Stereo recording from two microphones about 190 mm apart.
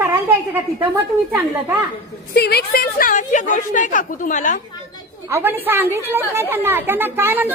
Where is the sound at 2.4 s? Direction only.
55° left (ahead or behind); by 4.6 s 40° left (ahead or behind).